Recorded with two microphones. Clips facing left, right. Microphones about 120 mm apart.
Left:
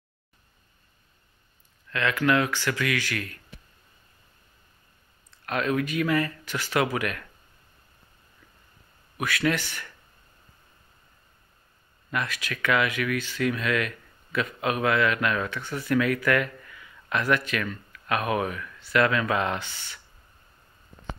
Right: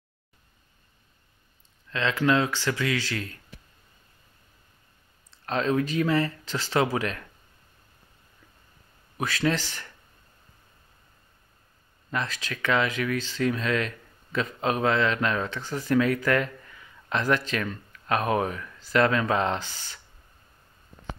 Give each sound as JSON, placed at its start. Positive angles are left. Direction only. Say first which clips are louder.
{"t": 1.9, "sound": "speech", "louder": "even", "side_deg": -20}
{"t": 5.4, "sound": "speech", "louder": "right 1 dB", "side_deg": -30}
{"t": 9.1, "sound": "speech", "louder": "even", "side_deg": -30}
{"t": 12.1, "sound": "speech", "louder": "even", "side_deg": -35}